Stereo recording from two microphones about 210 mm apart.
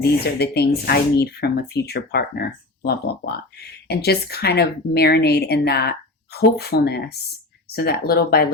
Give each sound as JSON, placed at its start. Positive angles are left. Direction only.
{"t": 0.0, "sound": "speech", "side_deg": 50}